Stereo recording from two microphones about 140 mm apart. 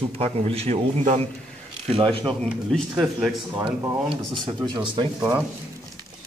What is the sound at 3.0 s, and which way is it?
Speech, 5° right (ahead or behind).